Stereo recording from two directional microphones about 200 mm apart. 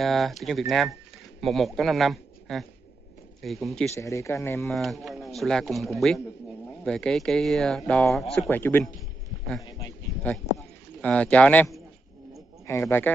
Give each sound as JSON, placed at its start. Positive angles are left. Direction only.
{"t": 0.0, "sound": "speech", "side_deg": 0}
{"t": 3.9, "sound": "speech", "side_deg": 15}
{"t": 4.6, "sound": "speech", "side_deg": 0}
{"t": 9.7, "sound": "a sound", "side_deg": 20}
{"t": 10.3, "sound": "speech", "side_deg": 10}